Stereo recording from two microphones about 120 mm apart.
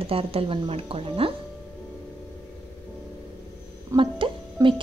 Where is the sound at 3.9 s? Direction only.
45° right (ahead or behind).